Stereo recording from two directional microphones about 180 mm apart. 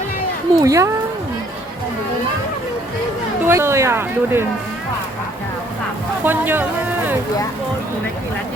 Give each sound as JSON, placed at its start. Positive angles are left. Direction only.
{"t": 0.6, "sound": "speech", "side_deg": -20}
{"t": 3.4, "sound": "speech", "side_deg": -15}
{"t": 6.2, "sound": "speech", "side_deg": -10}